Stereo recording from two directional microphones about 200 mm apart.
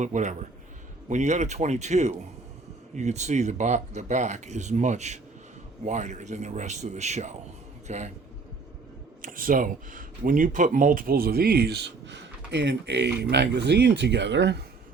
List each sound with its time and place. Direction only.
0.0 s speech: 35° right (ahead or behind)
9.2 s speech: 45° right (ahead or behind); by 14.6 s 60° right (ahead or behind)